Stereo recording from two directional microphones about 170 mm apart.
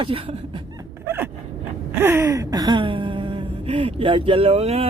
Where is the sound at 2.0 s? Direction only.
15° right (ahead or behind).